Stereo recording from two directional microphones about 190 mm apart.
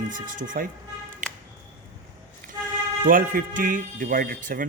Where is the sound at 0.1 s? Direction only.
45° right (ahead or behind).